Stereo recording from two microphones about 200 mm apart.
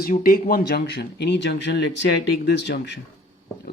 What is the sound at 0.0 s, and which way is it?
Speech, 45° left (ahead or behind).